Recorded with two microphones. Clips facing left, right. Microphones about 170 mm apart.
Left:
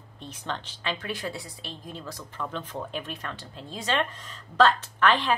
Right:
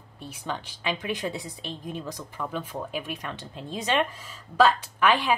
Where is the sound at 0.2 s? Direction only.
10° right (ahead or behind).